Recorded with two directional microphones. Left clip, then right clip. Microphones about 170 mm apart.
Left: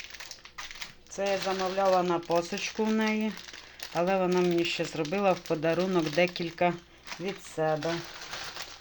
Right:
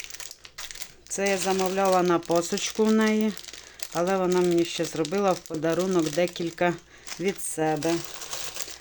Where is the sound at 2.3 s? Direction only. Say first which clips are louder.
Right 4 dB; 35° right (ahead or behind).